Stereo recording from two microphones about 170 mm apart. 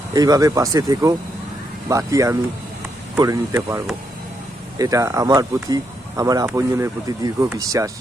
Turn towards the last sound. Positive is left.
turn(degrees=-20)  # may be behind; listen again after turning